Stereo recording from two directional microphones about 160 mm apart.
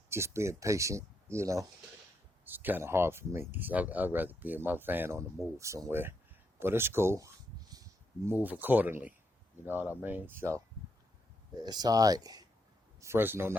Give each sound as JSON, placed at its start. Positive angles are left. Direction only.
{"t": 0.1, "sound": "speech", "side_deg": -15}
{"t": 11.6, "sound": "speech", "side_deg": -25}